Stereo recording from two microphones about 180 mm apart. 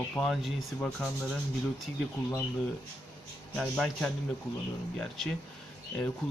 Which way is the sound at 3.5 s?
5° left (ahead or behind).